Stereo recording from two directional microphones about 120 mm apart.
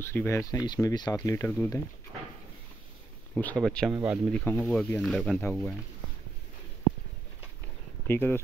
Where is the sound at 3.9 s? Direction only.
15° right (ahead or behind).